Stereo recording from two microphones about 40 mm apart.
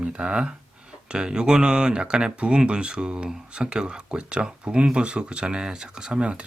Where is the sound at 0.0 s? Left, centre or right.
Right.